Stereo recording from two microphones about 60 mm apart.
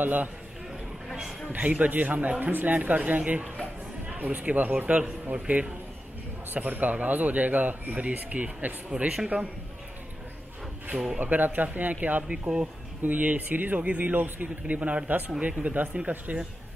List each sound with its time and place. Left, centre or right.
0.0 s speech: right
1.5 s speech: right
11.1 s speech: right